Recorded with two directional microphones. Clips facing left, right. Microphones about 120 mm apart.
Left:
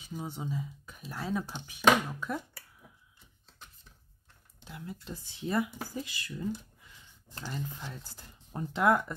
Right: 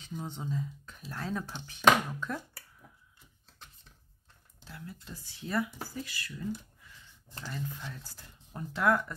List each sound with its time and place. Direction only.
0.0 s speech: 10° left (ahead or behind)
4.6 s speech: 20° left (ahead or behind)
7.3 s speech: 30° left (ahead or behind)